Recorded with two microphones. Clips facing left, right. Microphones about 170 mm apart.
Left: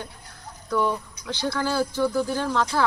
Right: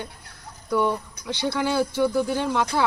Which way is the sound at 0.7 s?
15° right (ahead or behind).